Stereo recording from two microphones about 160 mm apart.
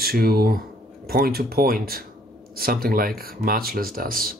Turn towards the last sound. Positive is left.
turn(degrees=-65)  # may be behind; listen again after turning